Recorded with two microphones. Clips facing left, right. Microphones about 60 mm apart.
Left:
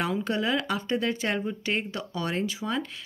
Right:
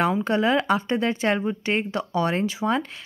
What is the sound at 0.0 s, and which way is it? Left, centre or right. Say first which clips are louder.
Speech: right 6 dB; right.